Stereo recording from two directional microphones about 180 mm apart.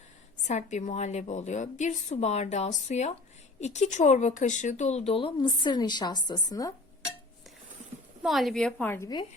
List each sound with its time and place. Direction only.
0.4 s speech: 40° left (ahead or behind); by 6.7 s 20° left (ahead or behind)
8.2 s a woman's voice: centre (ahead or behind); by 9.2 s 20° left (ahead or behind)